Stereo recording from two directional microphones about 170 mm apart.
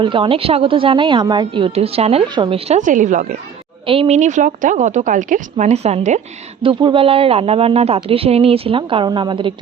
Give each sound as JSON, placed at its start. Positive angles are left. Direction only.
{"t": 0.0, "sound": "speech", "side_deg": -30}
{"t": 3.8, "sound": "speech", "side_deg": -35}